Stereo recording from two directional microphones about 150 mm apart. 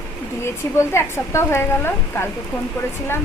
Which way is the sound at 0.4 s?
15° left (ahead or behind).